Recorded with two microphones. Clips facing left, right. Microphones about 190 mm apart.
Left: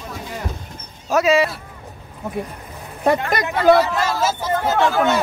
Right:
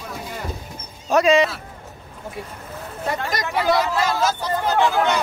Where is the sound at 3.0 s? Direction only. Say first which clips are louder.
Left 7 dB; 55° left (ahead or behind).